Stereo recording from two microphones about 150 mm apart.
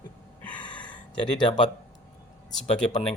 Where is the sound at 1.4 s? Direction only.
30° left (ahead or behind).